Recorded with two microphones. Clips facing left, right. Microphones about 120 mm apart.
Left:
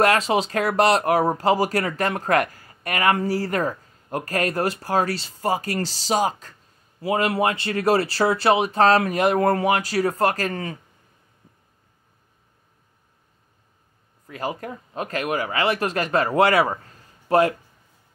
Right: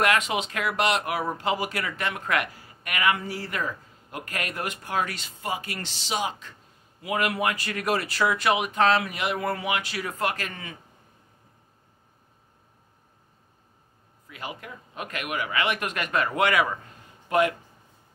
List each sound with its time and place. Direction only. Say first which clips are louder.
0.0 s speech: left 5 dB; 35° left (ahead or behind)
14.2 s speech: left 9 dB; 40° left (ahead or behind)